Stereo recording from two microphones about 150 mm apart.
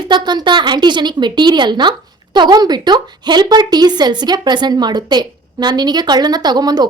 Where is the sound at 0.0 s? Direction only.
30° right (ahead or behind).